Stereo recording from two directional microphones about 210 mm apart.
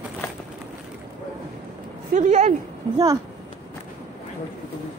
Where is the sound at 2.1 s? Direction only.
35° right (ahead or behind).